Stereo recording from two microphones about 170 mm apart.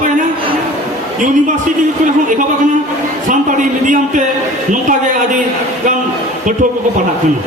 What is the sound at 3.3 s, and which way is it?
Speech, 50° right (ahead or behind).